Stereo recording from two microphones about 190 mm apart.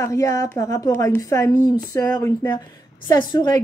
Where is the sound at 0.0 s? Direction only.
15° left (ahead or behind).